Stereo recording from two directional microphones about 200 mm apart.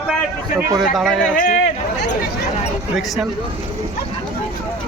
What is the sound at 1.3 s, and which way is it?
Speech, 40° left (ahead or behind).